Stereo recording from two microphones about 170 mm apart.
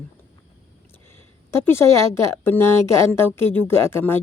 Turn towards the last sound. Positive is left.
turn(degrees=15)  # may be behind; listen again after turning